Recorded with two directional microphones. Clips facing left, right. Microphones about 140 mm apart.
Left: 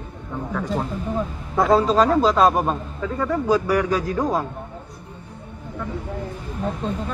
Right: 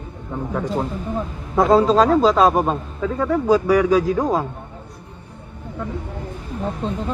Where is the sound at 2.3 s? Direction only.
Centre (ahead or behind).